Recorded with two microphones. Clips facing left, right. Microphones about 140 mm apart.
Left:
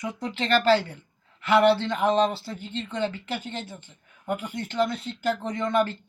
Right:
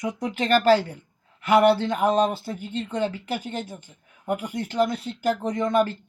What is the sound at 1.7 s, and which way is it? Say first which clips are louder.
Speech: right 1 dB; 10° right (ahead or behind).